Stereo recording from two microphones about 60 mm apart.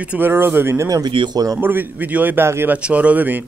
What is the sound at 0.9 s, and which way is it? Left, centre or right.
Speech, right.